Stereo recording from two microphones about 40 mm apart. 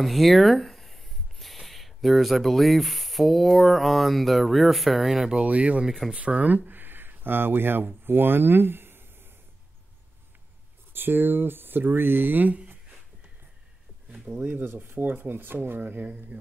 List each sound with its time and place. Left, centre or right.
0.0 s speech: centre
5.4 s speech: right
5.9 s speech: centre
6.1 s speech: right
10.9 s speech: right
14.3 s speech: centre
14.6 s speech: right